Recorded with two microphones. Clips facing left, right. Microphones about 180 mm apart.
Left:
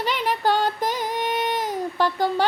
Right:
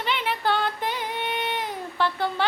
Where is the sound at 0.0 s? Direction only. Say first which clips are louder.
Left 3 dB; 40° left (ahead or behind).